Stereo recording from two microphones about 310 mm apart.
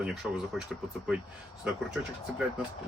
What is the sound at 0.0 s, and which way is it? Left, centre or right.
Mechanisms, centre.